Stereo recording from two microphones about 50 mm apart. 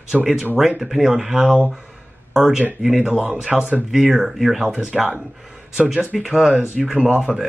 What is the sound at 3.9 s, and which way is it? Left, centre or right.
Speech, centre.